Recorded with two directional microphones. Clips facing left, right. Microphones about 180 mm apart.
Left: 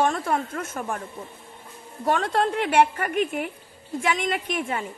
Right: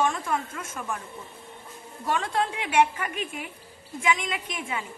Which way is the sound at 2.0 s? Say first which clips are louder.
Left 4 dB; 60° left (ahead or behind).